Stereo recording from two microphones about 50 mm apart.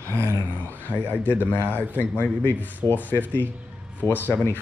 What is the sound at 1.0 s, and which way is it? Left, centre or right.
Speech, right.